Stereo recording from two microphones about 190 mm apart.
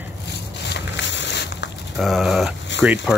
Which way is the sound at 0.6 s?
65° left (ahead or behind).